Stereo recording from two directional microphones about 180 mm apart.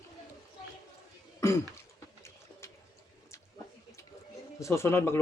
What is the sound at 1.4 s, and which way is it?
Throat clearing, 15° left (ahead or behind).